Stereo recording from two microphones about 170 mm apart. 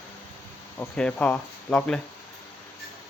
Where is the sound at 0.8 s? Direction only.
5° left (ahead or behind).